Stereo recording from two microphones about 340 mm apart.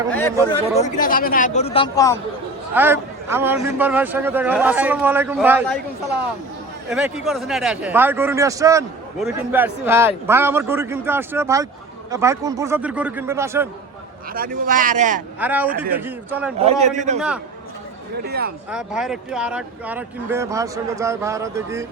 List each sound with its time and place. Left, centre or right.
0.1 s a man's voice: centre
0.8 s speech: left
2.7 s a man's voice: centre
6.9 s a man's voice: centre
14.3 s speech: right
15.4 s a man's voice: centre
16.6 s speech: centre
17.2 s a man's voice: centre
18.3 s speech: right
18.7 s speech: centre